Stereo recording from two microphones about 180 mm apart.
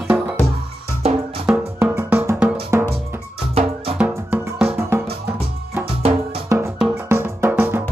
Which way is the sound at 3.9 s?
10° right (ahead or behind).